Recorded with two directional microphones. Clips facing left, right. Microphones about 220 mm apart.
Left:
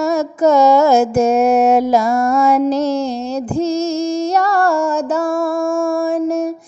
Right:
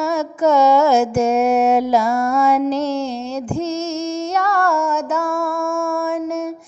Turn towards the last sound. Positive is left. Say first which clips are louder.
# left 3 dB
turn(degrees=35)  # may be behind; listen again after turning